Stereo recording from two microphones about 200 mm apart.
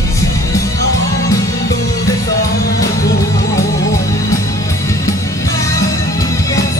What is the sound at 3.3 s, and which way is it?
Music, 15° left (ahead or behind).